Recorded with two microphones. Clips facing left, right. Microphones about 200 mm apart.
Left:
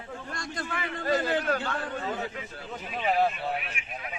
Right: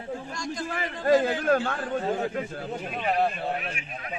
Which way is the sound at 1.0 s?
50° right (ahead or behind).